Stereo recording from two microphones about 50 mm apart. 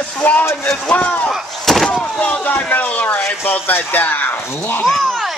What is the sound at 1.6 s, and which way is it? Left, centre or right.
Vehicle, centre.